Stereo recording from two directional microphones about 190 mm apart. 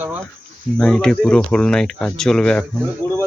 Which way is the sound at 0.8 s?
5° left (ahead or behind).